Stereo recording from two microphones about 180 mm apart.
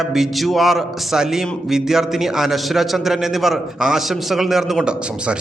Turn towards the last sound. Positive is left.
turn(degrees=-5)  # may be behind; listen again after turning